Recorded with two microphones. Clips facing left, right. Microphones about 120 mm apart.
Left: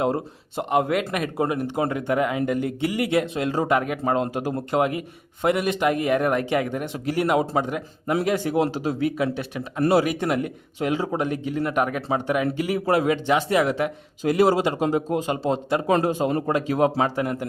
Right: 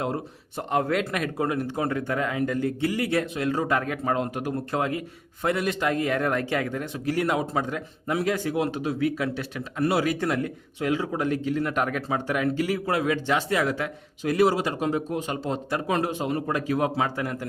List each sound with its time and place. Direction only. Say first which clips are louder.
0.7 s a man's voice: left 2 dB; 15° left (ahead or behind)
1.4 s a man's voice: left 3 dB; 20° left (ahead or behind)
3.7 s a man's voice: left 3 dB; 15° left (ahead or behind)
8.5 s a man's voice: left 3 dB; 30° left (ahead or behind)
9.0 s a man's voice: left 3 dB; 20° left (ahead or behind)
10.8 s a man's voice: left 2 dB; 30° left (ahead or behind)
11.2 s a man's voice: even; 15° left (ahead or behind)
12.8 s a man's voice: left 4 dB; 30° left (ahead or behind)
14.8 s a man's voice: left 4 dB; 30° left (ahead or behind)
16.5 s a man's voice: left 4 dB; 25° left (ahead or behind)